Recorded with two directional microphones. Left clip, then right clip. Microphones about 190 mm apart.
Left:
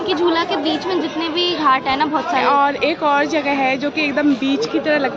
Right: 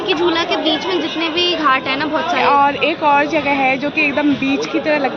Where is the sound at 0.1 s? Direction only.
20° left (ahead or behind).